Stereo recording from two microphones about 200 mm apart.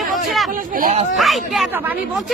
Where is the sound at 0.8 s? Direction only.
40° right (ahead or behind).